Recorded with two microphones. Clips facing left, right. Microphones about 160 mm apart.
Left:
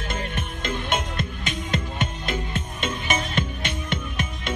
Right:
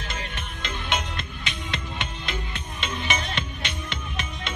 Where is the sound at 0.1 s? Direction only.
50° left (ahead or behind).